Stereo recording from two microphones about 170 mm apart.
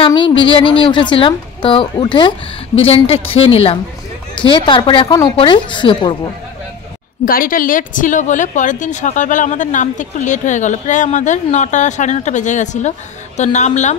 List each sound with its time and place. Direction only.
0.0 s a woman's voice: 30° left (ahead or behind)
7.2 s a woman's voice: 55° left (ahead or behind)